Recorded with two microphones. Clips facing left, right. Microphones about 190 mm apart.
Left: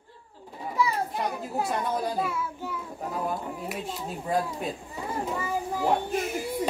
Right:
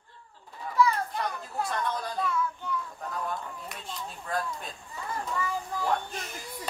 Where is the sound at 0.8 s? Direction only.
10° left (ahead or behind).